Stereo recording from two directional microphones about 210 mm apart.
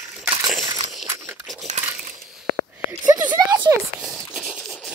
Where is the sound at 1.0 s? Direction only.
15° right (ahead or behind).